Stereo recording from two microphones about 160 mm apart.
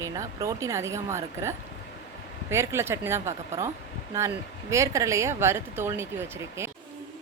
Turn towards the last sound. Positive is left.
turn(degrees=-15)  # may be behind; listen again after turning